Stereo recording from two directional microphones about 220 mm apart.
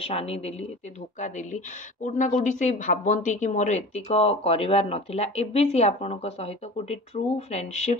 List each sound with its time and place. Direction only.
0.0 s speech: 25° left (ahead or behind)
2.0 s speech: 35° left (ahead or behind)